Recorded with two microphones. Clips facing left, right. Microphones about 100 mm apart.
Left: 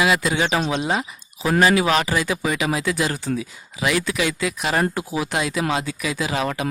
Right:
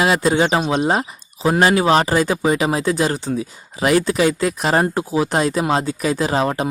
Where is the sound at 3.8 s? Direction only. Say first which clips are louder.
Right 6 dB; 40° right (ahead or behind).